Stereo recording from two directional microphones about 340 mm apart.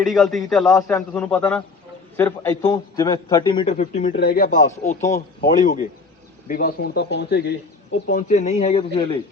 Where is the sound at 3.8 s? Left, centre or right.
Left.